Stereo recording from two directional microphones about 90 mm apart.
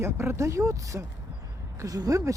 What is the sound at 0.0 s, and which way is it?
Speech, 30° right (ahead or behind).